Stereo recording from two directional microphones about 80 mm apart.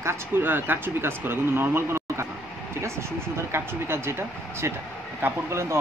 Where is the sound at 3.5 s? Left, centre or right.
Right.